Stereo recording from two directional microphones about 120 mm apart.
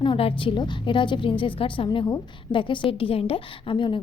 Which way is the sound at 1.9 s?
35° left (ahead or behind).